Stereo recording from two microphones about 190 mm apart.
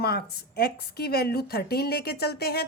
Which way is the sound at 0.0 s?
55° left (ahead or behind).